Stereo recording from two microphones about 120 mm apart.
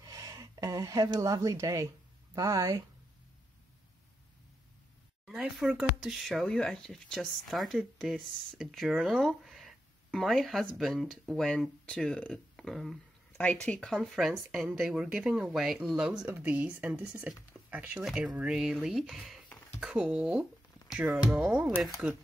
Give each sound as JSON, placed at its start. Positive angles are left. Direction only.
{"t": 0.0, "sound": "speech", "side_deg": -30}
{"t": 5.2, "sound": "speech", "side_deg": -5}
{"t": 13.4, "sound": "speech", "side_deg": 10}
{"t": 17.5, "sound": "a sound", "side_deg": -15}
{"t": 18.0, "sound": "speech", "side_deg": -10}